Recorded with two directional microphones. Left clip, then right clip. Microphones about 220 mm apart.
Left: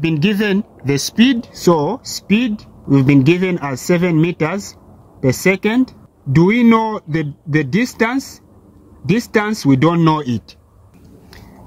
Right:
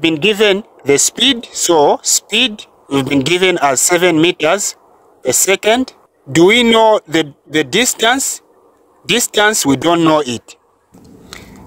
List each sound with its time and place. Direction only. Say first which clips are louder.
0.0 s speech: right 6 dB; 40° right (ahead or behind)
1.6 s speech: right 5 dB; 55° right (ahead or behind)